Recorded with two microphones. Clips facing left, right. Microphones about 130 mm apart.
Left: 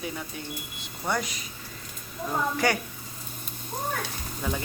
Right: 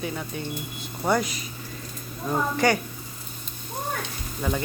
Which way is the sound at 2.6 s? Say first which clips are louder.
Right 4 dB; 5° left (ahead or behind).